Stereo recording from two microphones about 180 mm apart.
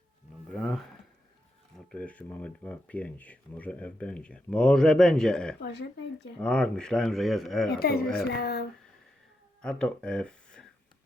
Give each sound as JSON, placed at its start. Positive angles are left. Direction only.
{"t": 0.5, "sound": "a sound", "side_deg": 0}
{"t": 1.9, "sound": "speech", "side_deg": 5}
{"t": 5.5, "sound": "speech", "side_deg": 70}
{"t": 6.4, "sound": "speech", "side_deg": 5}
{"t": 7.8, "sound": "speech", "side_deg": 60}
{"t": 9.6, "sound": "speech", "side_deg": 5}